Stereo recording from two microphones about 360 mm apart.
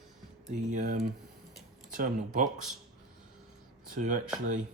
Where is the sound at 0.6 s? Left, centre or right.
Right.